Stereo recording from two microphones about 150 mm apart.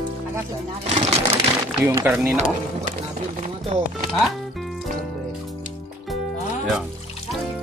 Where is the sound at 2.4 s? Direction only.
50° right (ahead or behind).